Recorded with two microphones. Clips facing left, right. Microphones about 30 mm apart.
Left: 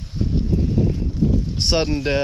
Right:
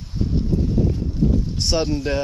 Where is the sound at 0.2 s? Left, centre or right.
Centre.